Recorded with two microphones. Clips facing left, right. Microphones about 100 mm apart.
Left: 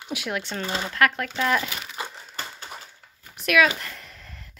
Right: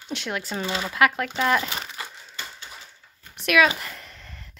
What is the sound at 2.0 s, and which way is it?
Crushing, 20° left (ahead or behind).